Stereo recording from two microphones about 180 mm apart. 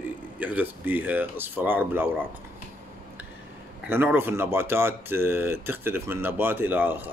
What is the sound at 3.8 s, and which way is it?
Speech, 10° right (ahead or behind).